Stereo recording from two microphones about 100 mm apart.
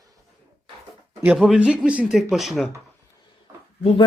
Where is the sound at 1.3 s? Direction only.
5° right (ahead or behind).